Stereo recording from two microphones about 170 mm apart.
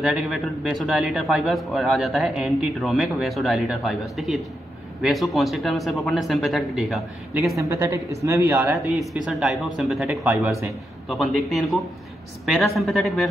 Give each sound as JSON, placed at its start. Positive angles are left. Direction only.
{"t": 0.0, "sound": "a man's voice", "side_deg": -5}
{"t": 7.5, "sound": "a man's voice", "side_deg": -15}